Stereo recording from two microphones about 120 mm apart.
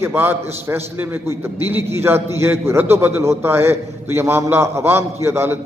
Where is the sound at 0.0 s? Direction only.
15° right (ahead or behind).